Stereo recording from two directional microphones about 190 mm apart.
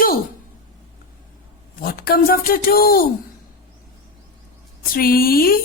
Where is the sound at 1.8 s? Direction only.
50° left (ahead or behind).